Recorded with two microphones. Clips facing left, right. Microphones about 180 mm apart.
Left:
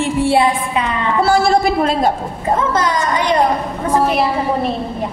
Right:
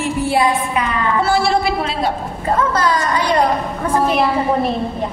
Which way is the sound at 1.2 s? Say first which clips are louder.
Left 5 dB; 40° left (ahead or behind).